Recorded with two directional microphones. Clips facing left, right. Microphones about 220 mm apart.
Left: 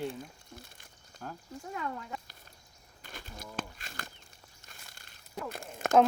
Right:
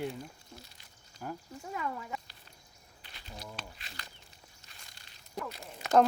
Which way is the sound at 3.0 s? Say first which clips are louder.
Left 1 dB; 50° left (ahead or behind).